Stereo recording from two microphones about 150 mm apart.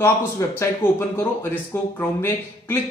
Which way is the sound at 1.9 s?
15° left (ahead or behind).